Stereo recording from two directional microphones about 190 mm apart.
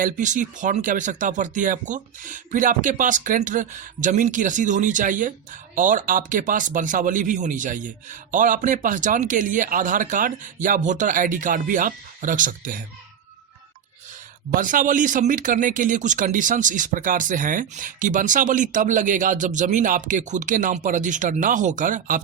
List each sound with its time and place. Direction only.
0.0 s speech: 40° right (ahead or behind)
14.5 s speech: 45° right (ahead or behind)